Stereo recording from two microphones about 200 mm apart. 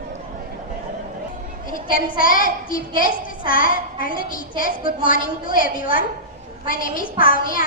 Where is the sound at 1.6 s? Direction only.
45° left (ahead or behind).